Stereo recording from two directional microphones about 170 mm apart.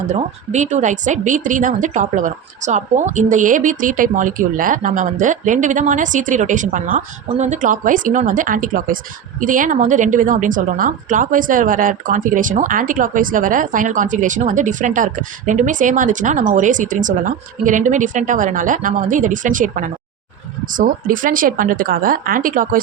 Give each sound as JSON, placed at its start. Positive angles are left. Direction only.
{"t": 0.1, "sound": "a woman's voice", "side_deg": -45}